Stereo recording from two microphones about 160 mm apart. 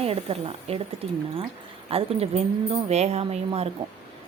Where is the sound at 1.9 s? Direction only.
35° right (ahead or behind).